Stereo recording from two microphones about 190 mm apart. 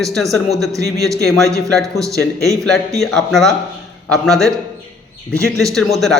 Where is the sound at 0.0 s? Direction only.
Centre (ahead or behind).